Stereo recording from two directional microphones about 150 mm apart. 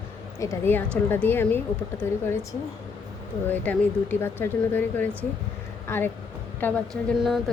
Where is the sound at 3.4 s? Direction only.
10° left (ahead or behind).